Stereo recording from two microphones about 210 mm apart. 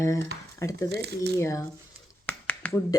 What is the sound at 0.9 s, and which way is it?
Speech, 50° right (ahead or behind).